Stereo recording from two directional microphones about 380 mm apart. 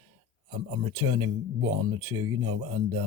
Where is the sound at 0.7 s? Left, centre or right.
Right.